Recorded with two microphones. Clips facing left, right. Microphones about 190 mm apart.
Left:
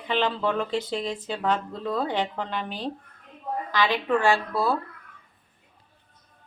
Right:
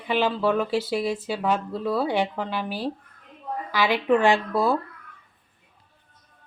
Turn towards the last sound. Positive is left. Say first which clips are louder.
# right 2 dB
turn(degrees=-15)  # may be behind; listen again after turning